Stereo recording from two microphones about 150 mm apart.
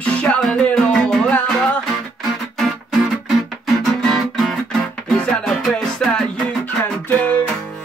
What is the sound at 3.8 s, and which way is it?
Guitar, centre (ahead or behind).